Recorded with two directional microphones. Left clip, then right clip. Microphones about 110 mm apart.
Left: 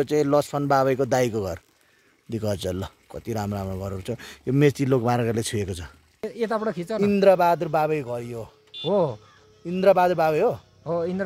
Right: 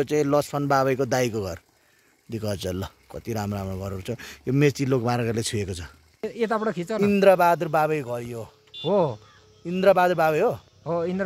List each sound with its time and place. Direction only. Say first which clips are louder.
0.0 s speech: left 1 dB; 10° left (ahead or behind)
2.8 s speech: even; 10° left (ahead or behind)
4.6 s speech: left 2 dB; 25° left (ahead or behind)
6.2 s speech: right 1 dB; 75° right (ahead or behind)
7.1 s speech: even; 5° right (ahead or behind)
8.9 s speech: even; 65° right (ahead or behind)
9.7 s speech: even; 5° right (ahead or behind)
10.8 s speech: right 1 dB; 65° right (ahead or behind)